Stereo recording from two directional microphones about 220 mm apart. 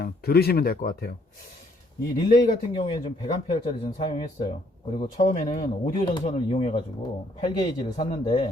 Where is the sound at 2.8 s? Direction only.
20° left (ahead or behind).